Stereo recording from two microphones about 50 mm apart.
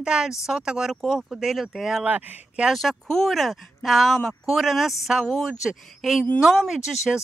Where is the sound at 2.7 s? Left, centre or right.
Centre.